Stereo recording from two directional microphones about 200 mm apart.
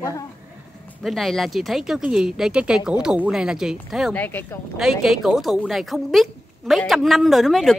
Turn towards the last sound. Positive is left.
turn(degrees=0)  # may be behind; listen again after turning